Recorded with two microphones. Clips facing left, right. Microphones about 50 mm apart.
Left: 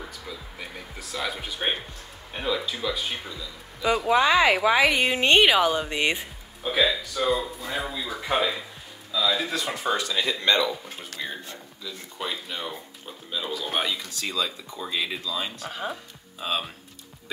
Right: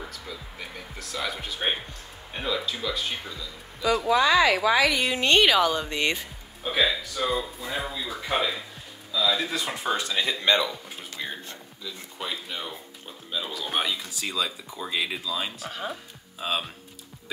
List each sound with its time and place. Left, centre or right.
0.1 s speech: centre
4.1 s speech: left
6.6 s speech: centre
9.9 s speech: centre
11.2 s a sound: centre
11.8 s speech: centre